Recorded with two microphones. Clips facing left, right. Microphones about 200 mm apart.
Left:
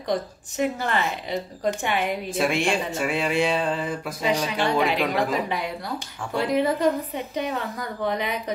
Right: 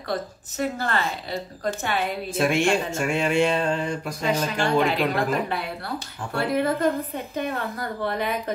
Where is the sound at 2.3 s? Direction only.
Centre (ahead or behind).